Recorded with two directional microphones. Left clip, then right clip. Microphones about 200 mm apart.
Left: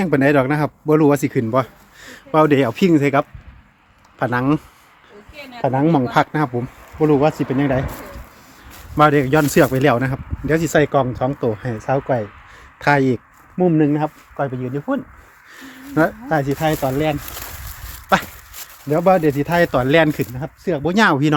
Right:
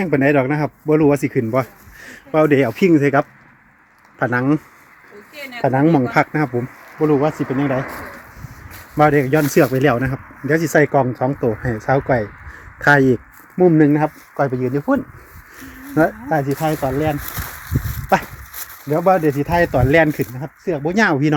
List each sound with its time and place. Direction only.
0.0 s speech: 5° left (ahead or behind)
5.3 s speech: 50° right (ahead or behind)
5.6 s speech: 5° right (ahead or behind)
7.0 s speech: 15° left (ahead or behind)
9.0 s speech: 5° left (ahead or behind)
18.9 s speech: 5° left (ahead or behind)